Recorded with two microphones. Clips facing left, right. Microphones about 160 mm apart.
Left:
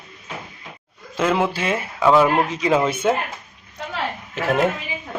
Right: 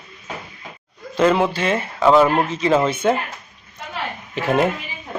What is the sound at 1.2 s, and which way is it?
Speech, 5° left (ahead or behind).